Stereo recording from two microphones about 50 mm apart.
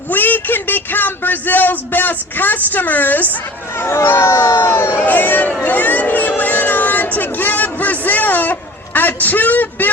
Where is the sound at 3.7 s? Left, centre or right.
Left.